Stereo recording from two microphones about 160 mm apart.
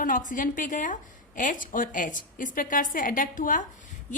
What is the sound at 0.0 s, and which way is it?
A woman's voice, 55° left (ahead or behind).